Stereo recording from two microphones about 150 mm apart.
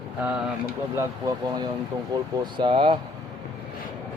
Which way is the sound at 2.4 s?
30° right (ahead or behind).